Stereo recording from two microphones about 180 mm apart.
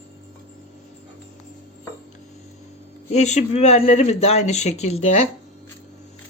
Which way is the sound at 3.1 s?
40° left (ahead or behind).